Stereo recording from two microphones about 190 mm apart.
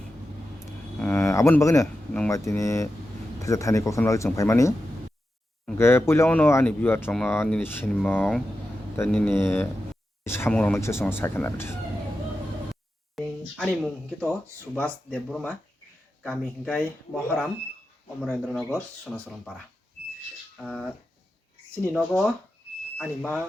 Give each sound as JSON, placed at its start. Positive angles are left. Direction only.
{"t": 0.9, "sound": "a sound", "side_deg": 10}
{"t": 2.1, "sound": "speech", "side_deg": 10}
{"t": 5.7, "sound": "speech", "side_deg": 15}
{"t": 13.1, "sound": "speech", "side_deg": 0}
{"t": 18.2, "sound": "speech", "side_deg": 0}
{"t": 20.6, "sound": "speech", "side_deg": 5}